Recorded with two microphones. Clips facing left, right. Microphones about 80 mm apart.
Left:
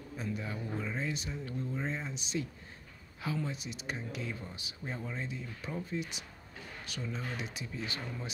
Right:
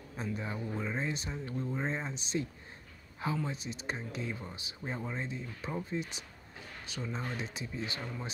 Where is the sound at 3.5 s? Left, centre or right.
Right.